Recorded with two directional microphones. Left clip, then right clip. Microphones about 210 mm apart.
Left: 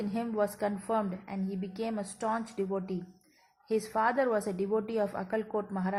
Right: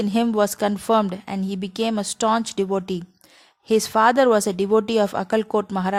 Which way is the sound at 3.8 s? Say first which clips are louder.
Right 12 dB; 45° right (ahead or behind).